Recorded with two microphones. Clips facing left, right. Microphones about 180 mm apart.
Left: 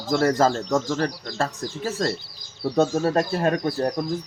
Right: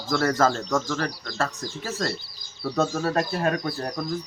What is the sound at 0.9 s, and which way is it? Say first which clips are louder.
Speech: left 3 dB; 25° left (ahead or behind).